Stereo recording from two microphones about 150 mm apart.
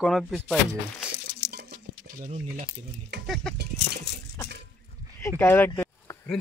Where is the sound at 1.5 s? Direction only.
80° right.